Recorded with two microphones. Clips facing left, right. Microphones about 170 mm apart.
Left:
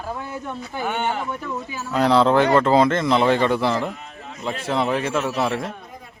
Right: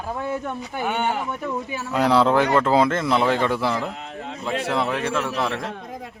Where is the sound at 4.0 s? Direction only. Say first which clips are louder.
Right 5 dB; 75° right (ahead or behind).